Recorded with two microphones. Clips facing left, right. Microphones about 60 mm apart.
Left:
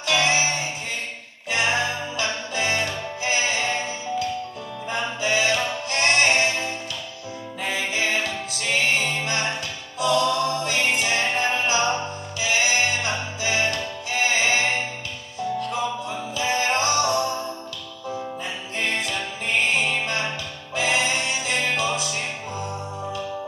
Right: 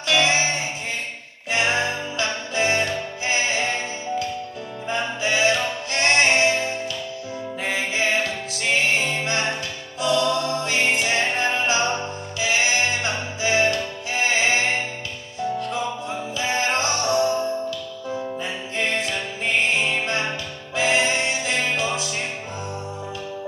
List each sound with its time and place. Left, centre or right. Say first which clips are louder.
0.1 s music: right 1 dB; right
10.1 s mantra: right 1 dB; right
10.5 s music: right 1 dB; right